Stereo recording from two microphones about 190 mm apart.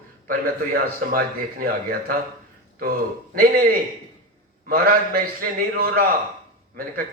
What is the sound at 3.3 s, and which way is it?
A man's voice, 50° right (ahead or behind).